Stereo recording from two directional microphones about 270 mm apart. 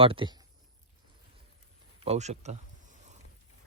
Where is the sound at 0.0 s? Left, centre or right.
Centre.